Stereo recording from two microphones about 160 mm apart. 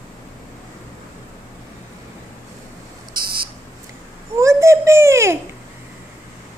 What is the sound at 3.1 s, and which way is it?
Buzzer, 70° right (ahead or behind).